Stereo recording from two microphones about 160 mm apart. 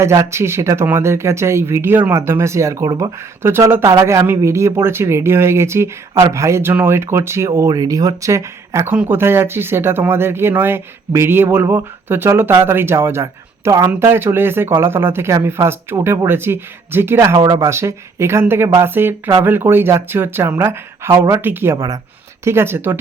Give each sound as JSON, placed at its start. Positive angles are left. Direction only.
{"t": 0.0, "sound": "speech", "side_deg": -15}